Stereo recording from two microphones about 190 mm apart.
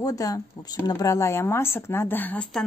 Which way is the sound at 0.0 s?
20° left (ahead or behind).